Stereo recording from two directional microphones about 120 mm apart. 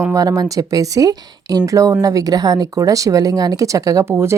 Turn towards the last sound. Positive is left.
turn(degrees=-20)  # may be behind; listen again after turning